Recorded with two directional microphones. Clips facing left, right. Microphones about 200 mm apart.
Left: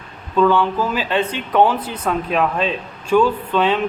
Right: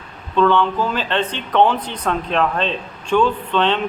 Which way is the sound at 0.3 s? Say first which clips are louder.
Even; 5° left (ahead or behind).